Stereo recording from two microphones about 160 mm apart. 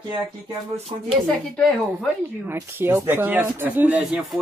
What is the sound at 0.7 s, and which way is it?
Speech, 40° right (ahead or behind).